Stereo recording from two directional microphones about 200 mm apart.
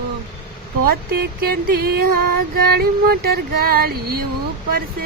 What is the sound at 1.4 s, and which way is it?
Speech, 50° right (ahead or behind).